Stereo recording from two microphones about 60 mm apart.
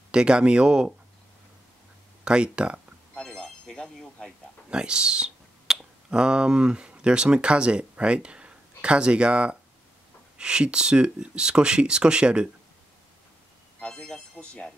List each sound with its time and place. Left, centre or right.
0.1 s speech: centre
2.2 s speech: centre
3.2 s a sound: centre
4.6 s speech: centre
13.7 s speech: centre